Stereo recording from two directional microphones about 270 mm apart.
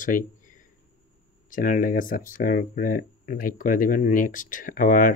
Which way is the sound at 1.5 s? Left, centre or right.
Left.